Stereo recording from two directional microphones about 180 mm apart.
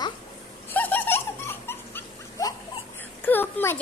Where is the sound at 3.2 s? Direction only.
10° left (ahead or behind).